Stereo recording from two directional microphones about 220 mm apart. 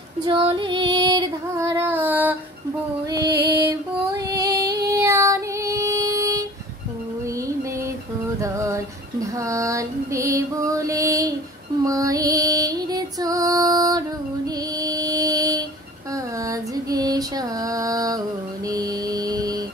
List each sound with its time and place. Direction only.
0.2 s female singing: 25° right (ahead or behind)
3.4 s child singing: 15° right (ahead or behind)
8.4 s female singing: 15° right (ahead or behind)
11.8 s music: 15° right (ahead or behind)
14.8 s a sound: 15° right (ahead or behind)
16.4 s female singing: 15° right (ahead or behind)
18.7 s music: 15° right (ahead or behind)